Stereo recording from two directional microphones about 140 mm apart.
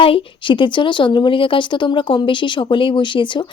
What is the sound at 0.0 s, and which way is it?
A woman's voice, 40° left (ahead or behind).